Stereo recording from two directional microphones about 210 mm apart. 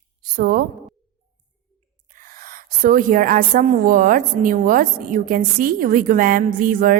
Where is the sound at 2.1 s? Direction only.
40° right (ahead or behind).